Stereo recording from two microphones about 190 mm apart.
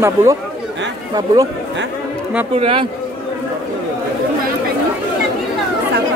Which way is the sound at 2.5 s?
30° right (ahead or behind).